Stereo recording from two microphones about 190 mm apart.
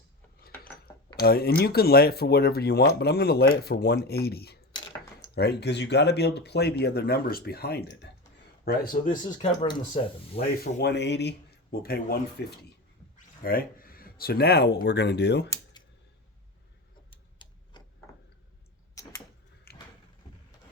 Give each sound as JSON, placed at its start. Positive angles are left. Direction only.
{"t": 1.2, "sound": "speech", "side_deg": 55}
{"t": 10.6, "sound": "speech", "side_deg": 60}
{"t": 13.4, "sound": "speech", "side_deg": 50}
{"t": 17.3, "sound": "tick-tock", "side_deg": 25}
{"t": 19.0, "sound": "a sound", "side_deg": 15}
{"t": 19.7, "sound": "a sound", "side_deg": 55}